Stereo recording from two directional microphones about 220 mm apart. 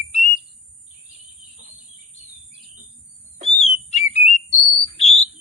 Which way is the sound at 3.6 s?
30° left (ahead or behind).